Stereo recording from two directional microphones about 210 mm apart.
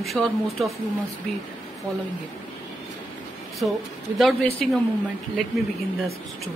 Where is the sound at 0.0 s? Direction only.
Centre (ahead or behind).